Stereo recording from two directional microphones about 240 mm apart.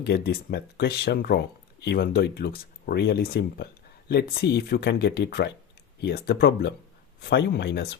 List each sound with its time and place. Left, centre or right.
0.0 s speech: left